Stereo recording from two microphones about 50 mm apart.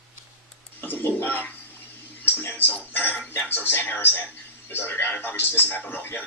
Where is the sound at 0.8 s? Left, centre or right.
Left.